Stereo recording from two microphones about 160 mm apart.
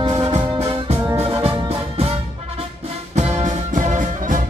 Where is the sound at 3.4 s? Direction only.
50° right (ahead or behind).